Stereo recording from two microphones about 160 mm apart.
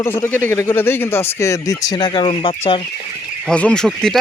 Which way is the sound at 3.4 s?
5° left (ahead or behind).